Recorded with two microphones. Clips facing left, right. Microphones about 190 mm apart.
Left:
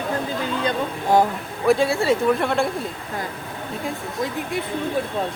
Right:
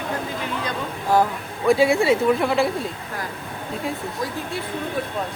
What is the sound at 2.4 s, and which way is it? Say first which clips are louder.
Speech: right 1 dB; centre (ahead or behind).